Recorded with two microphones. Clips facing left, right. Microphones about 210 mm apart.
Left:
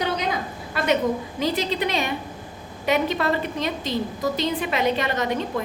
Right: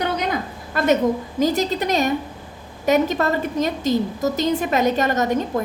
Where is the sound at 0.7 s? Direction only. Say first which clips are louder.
Right 5 dB; 45° right (ahead or behind).